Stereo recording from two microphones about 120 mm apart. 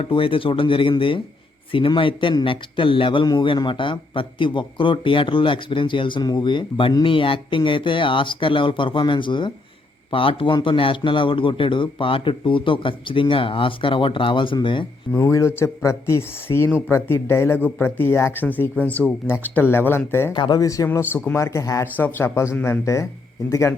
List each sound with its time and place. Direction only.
0.0 s a man's voice: 50° left (ahead or behind)
15.1 s speech: 25° left (ahead or behind)
20.3 s speech: 35° left (ahead or behind)